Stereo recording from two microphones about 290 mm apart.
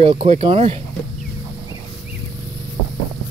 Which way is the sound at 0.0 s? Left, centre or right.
Centre.